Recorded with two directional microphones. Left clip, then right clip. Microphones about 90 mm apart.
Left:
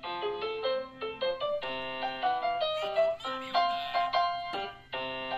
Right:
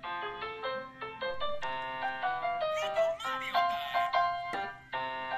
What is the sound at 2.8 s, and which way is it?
Music, 20° left (ahead or behind).